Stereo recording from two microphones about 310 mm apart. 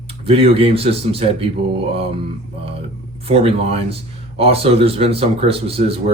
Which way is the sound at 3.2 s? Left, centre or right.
Centre.